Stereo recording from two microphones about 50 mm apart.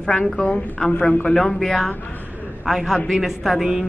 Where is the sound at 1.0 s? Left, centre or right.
Left.